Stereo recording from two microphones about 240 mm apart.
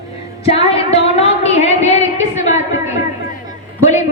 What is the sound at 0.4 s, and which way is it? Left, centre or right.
Music, left.